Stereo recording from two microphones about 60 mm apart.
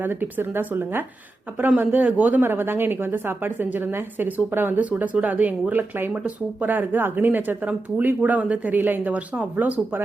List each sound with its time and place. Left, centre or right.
0.0 s a woman's voice: right